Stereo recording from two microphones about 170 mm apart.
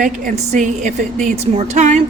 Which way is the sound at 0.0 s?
50° right (ahead or behind).